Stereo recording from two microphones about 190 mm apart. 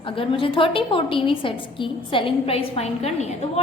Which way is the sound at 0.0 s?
25° left (ahead or behind).